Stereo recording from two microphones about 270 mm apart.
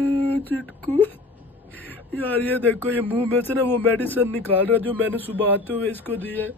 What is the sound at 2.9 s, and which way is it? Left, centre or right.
Speech, centre.